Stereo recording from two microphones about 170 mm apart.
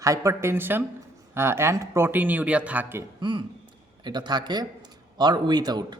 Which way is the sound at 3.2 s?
25° right (ahead or behind).